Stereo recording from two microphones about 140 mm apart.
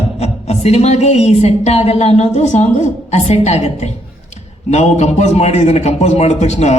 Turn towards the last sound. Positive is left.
turn(degrees=55)  # may be behind; listen again after turning